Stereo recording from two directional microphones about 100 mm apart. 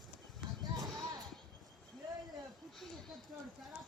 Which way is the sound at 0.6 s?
40° right (ahead or behind).